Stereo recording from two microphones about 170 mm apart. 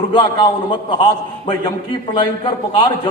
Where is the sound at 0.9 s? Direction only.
25° left (ahead or behind).